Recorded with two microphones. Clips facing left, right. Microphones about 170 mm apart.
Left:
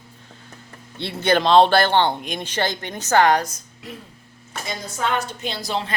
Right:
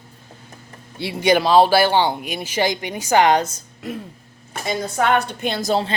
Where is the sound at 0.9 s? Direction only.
10° right (ahead or behind).